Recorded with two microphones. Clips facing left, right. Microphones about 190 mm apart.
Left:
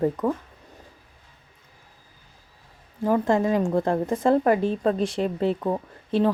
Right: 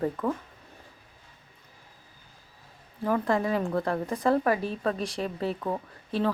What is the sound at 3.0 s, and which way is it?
A woman's voice, 20° left (ahead or behind).